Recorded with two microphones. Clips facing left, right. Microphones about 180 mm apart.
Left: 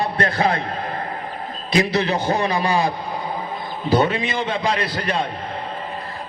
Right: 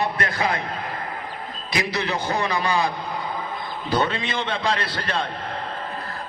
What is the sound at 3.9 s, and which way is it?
A man's voice, 20° left (ahead or behind).